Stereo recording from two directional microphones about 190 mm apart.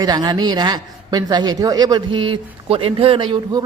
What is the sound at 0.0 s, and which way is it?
A man's voice, 20° right (ahead or behind).